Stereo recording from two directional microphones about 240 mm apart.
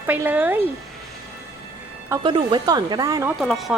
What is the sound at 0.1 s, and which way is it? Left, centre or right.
Speech, centre.